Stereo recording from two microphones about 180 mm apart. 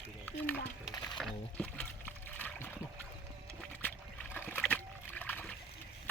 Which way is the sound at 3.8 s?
10° left (ahead or behind).